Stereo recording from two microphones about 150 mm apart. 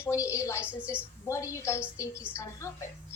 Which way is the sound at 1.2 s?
20° left (ahead or behind).